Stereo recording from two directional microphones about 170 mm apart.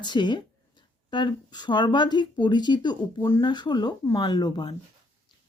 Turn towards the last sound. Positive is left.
turn(degrees=25)  # may be behind; listen again after turning